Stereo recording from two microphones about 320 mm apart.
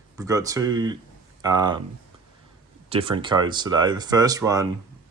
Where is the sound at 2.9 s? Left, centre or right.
Centre.